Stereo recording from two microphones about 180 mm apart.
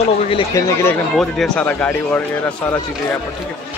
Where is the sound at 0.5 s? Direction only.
15° left (ahead or behind).